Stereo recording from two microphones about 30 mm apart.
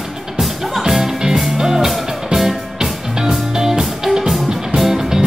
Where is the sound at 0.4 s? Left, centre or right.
Centre.